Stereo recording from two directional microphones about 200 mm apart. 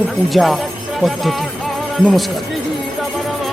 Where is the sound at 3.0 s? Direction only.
Centre (ahead or behind).